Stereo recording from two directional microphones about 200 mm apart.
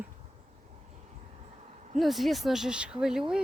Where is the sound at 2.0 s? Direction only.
Centre (ahead or behind).